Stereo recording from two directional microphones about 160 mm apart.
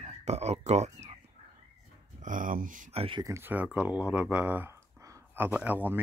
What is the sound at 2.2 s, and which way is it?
Speech, 55° right (ahead or behind).